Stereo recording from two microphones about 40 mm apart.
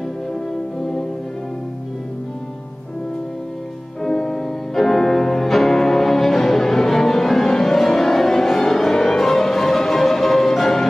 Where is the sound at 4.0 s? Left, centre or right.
Centre.